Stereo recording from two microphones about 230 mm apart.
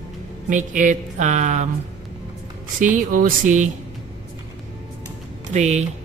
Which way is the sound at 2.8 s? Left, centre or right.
Right.